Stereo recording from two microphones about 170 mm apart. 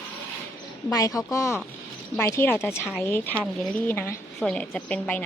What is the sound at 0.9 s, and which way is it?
A woman's voice, 20° left (ahead or behind).